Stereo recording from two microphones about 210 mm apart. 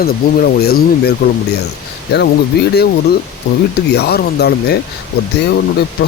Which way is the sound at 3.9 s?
50° left (ahead or behind).